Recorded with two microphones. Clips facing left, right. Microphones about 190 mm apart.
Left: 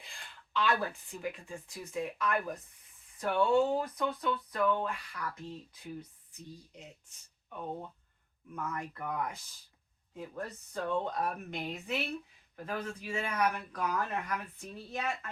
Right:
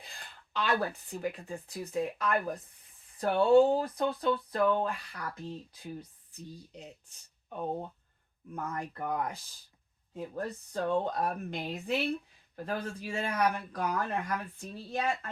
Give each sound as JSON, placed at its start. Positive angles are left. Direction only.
{"t": 0.5, "sound": "speech", "side_deg": -40}
{"t": 7.5, "sound": "speech", "side_deg": -35}